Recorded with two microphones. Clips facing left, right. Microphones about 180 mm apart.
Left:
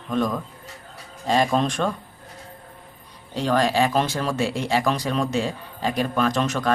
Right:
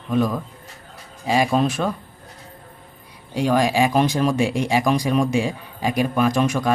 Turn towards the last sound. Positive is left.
turn(degrees=-10)  # may be behind; listen again after turning